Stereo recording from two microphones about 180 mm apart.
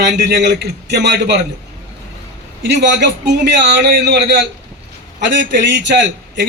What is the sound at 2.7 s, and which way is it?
Speech, 70° right (ahead or behind).